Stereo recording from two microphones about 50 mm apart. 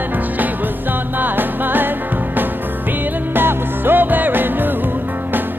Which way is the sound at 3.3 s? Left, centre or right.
Right.